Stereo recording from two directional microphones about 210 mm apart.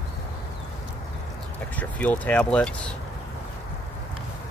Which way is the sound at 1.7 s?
5° left (ahead or behind).